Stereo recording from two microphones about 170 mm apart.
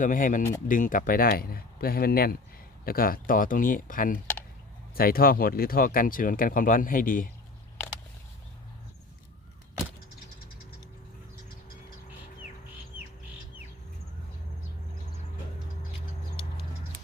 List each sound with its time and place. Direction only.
0.0 s speech: 50° left (ahead or behind)